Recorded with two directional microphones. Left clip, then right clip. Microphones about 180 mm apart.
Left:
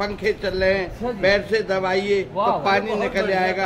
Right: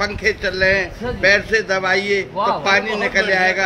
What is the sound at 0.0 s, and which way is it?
A man's voice, 20° left (ahead or behind).